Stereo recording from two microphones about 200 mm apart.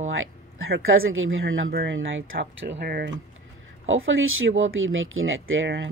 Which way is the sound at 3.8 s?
80° right.